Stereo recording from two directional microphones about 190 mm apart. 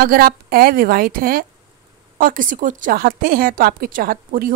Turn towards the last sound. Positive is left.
turn(degrees=-50)  # may be behind; listen again after turning